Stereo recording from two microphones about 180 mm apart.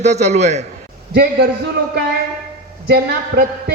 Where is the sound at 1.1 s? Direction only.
60° right (ahead or behind).